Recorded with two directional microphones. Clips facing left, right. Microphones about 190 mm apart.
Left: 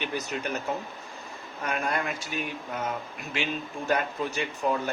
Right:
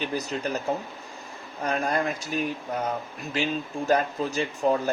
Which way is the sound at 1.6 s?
35° right (ahead or behind).